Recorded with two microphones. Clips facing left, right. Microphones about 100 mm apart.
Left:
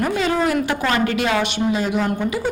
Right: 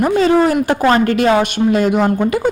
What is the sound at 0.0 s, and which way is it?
A woman's voice, 30° right (ahead or behind).